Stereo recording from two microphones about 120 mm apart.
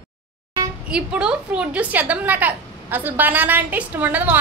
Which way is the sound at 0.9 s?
5° right (ahead or behind).